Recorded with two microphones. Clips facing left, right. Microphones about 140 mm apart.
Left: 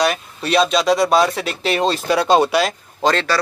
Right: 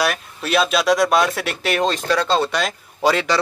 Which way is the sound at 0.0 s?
Centre (ahead or behind).